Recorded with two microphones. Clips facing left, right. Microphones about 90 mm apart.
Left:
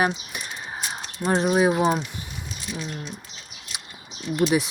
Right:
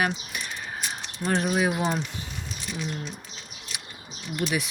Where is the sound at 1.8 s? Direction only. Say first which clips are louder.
Left 5 dB; 10° left (ahead or behind).